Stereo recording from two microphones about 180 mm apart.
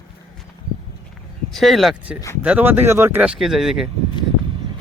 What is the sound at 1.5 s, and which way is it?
Speech, centre (ahead or behind).